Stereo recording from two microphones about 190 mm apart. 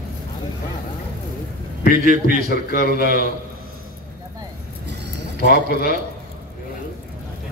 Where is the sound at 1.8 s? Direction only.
50° left (ahead or behind).